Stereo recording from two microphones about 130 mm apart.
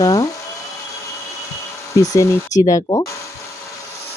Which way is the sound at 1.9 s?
25° left (ahead or behind).